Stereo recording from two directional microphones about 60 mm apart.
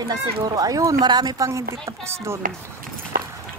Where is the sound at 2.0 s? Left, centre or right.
Right.